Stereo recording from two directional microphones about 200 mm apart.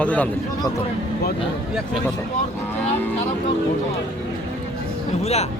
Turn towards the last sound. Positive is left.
turn(degrees=30)  # may be behind; listen again after turning